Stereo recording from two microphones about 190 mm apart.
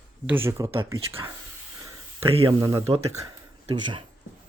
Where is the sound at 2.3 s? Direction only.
30° right (ahead or behind).